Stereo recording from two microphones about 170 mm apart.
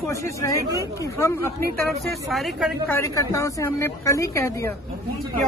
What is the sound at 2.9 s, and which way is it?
A woman's voice, 15° left (ahead or behind).